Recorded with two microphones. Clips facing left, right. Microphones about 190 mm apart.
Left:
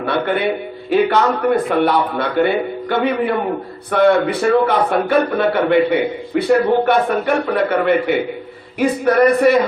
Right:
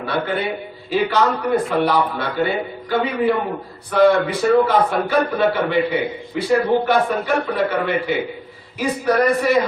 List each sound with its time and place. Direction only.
0.0 s a man's voice: 60° left (ahead or behind)